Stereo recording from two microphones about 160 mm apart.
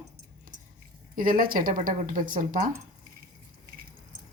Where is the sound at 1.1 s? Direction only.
60° right (ahead or behind).